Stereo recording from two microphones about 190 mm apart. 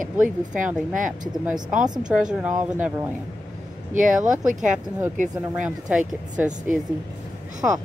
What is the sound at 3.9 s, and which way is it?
Speech, 40° right (ahead or behind).